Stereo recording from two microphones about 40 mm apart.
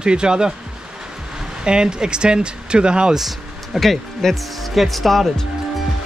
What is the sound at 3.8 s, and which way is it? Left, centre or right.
Speech, centre.